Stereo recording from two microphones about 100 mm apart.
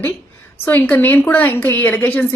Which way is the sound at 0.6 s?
20° left (ahead or behind).